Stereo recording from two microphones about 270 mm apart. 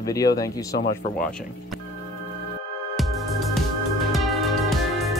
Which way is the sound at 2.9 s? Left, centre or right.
Centre.